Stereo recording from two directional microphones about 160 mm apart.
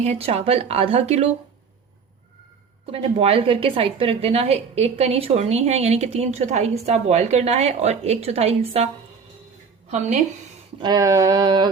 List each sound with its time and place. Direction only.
0.0 s a woman's voice: 40° right (ahead or behind)
2.9 s a woman's voice: 40° right (ahead or behind)
9.9 s a woman's voice: 45° right (ahead or behind)
10.8 s a sound: 25° right (ahead or behind)